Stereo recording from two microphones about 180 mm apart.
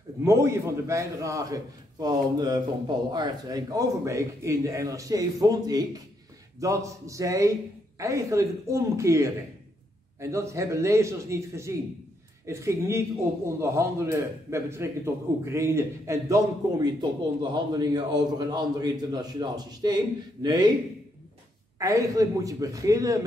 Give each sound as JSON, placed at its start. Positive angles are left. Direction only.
{"t": 0.2, "sound": "a man's voice", "side_deg": -15}
{"t": 21.7, "sound": "a man's voice", "side_deg": -20}